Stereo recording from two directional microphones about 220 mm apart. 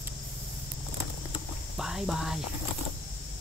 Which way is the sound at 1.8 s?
Centre (ahead or behind).